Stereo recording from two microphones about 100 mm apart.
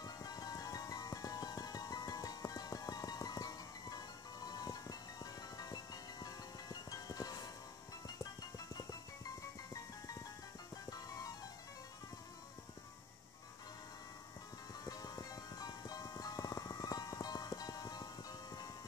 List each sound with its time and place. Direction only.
0.0 s music: 40° left (ahead or behind)
14.9 s music: 40° left (ahead or behind)